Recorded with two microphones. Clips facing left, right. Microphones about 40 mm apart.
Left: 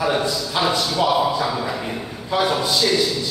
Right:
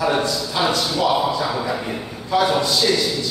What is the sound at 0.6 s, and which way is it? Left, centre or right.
Speech, centre.